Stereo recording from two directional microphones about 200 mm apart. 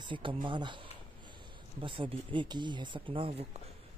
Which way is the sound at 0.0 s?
25° right (ahead or behind).